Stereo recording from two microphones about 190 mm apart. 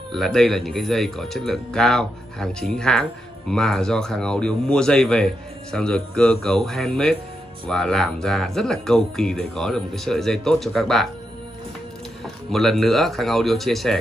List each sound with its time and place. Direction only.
0.1 s speech: centre (ahead or behind)
12.4 s speech: centre (ahead or behind)